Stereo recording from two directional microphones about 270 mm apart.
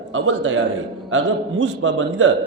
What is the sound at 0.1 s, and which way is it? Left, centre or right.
A man's voice, right.